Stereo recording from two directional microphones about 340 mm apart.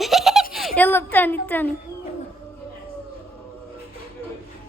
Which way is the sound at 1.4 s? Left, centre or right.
Centre.